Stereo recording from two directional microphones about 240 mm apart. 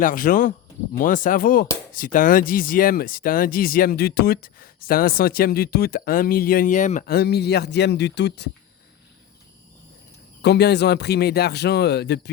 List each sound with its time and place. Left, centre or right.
0.0 s speech: left
10.4 s speech: left